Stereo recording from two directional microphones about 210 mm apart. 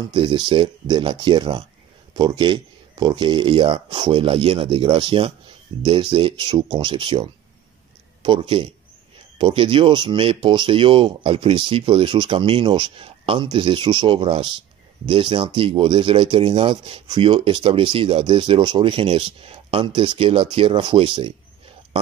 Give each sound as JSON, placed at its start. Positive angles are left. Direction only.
{"t": 0.1, "sound": "speech", "side_deg": -25}